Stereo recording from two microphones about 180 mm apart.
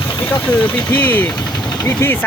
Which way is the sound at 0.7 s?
10° left (ahead or behind).